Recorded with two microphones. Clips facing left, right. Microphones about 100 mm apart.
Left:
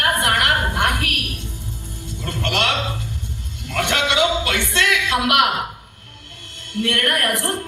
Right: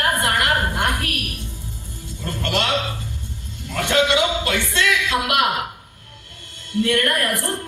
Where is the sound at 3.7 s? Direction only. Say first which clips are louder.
Right 1 dB; 70° left (ahead or behind).